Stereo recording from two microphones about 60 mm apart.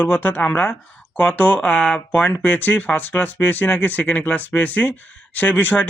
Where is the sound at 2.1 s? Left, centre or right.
Left.